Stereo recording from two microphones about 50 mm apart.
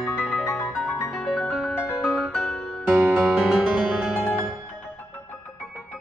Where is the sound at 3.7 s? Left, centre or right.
Right.